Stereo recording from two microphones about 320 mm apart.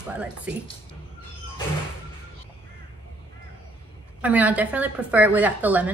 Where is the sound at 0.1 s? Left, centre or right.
Centre.